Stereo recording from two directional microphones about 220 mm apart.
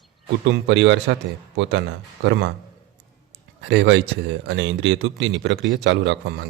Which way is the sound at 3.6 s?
55° right (ahead or behind).